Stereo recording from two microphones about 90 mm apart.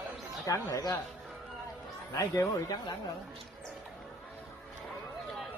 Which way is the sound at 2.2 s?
40° left (ahead or behind).